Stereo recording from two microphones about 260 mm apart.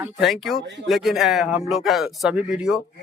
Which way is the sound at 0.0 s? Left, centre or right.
Centre.